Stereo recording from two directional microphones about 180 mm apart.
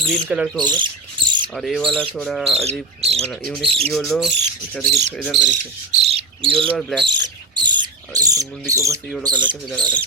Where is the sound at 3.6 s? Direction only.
30° right (ahead or behind).